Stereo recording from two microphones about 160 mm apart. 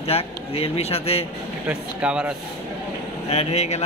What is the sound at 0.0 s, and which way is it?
Speech, 40° left (ahead or behind).